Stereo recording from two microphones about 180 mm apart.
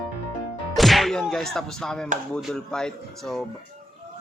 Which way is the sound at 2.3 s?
5° left (ahead or behind).